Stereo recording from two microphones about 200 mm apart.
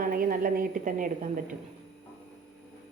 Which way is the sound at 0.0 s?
45° right (ahead or behind).